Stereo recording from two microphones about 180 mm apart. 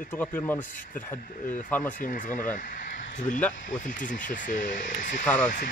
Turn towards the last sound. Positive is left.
turn(degrees=45)  # may be behind; listen again after turning